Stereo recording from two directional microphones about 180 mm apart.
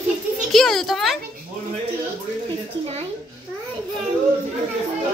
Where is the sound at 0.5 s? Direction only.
Centre (ahead or behind).